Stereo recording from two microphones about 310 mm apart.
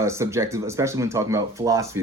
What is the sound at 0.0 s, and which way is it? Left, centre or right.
Speech, centre.